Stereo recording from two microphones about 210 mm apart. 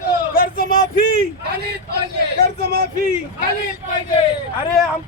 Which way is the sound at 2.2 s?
50° right (ahead or behind).